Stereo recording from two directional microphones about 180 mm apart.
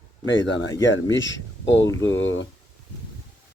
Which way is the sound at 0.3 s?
90° left.